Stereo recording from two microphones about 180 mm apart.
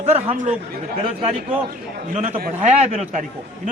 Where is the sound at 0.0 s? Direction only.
40° right (ahead or behind).